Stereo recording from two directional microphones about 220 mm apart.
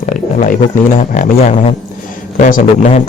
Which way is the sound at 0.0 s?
35° left (ahead or behind).